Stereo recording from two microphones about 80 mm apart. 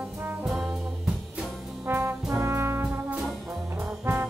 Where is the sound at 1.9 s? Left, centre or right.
Right.